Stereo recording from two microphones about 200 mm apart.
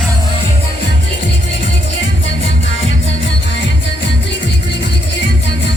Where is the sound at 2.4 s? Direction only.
70° left (ahead or behind).